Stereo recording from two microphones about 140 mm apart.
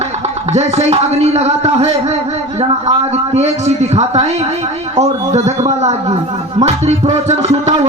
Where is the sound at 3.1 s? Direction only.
50° right (ahead or behind).